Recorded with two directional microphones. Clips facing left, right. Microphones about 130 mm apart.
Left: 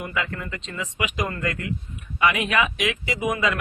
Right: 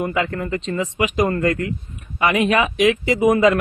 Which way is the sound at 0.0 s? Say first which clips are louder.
Right 7 dB; 40° right (ahead or behind).